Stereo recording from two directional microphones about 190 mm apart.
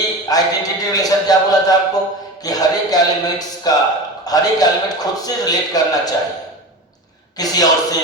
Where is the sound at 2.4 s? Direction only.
20° left (ahead or behind).